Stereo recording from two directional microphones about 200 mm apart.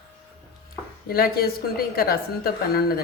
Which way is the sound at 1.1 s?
50° left (ahead or behind).